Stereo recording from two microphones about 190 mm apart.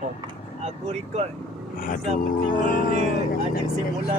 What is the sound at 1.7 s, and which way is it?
Speech, 50° left (ahead or behind).